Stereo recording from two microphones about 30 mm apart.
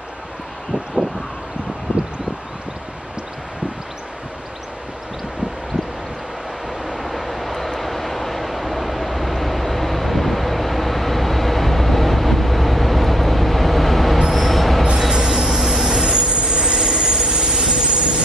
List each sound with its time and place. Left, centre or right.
1.9 s a sound: right
6.8 s vehicle: centre
14.3 s train: centre
15.1 s vehicle: centre
16.3 s train: right
16.8 s train: centre